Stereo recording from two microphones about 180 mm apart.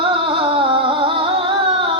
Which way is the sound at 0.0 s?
30° right (ahead or behind).